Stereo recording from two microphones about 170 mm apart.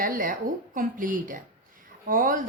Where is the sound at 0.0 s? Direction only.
55° right (ahead or behind).